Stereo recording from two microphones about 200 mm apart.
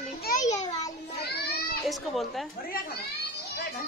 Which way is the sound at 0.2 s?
40° left (ahead or behind).